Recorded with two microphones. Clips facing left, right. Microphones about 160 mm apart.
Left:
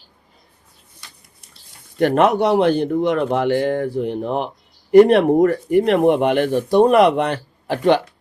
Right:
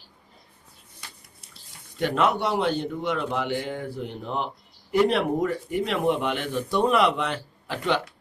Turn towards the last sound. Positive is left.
turn(degrees=60)  # may be behind; listen again after turning